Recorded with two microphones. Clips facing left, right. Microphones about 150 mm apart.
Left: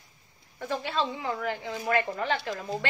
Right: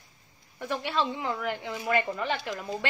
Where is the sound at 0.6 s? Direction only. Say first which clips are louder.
Even; 15° right (ahead or behind).